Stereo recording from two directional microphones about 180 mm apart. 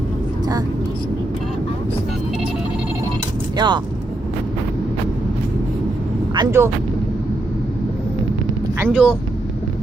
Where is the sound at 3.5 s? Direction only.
25° right (ahead or behind).